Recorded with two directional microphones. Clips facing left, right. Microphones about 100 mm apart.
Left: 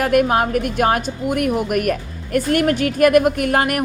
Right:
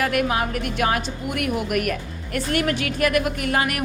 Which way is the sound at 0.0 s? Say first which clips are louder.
Left 6 dB; 45° left (ahead or behind).